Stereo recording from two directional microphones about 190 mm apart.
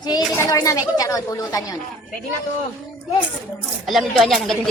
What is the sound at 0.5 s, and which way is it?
Speech, 15° left (ahead or behind).